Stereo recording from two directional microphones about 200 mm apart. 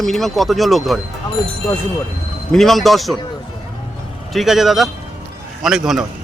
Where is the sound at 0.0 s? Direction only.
Centre (ahead or behind).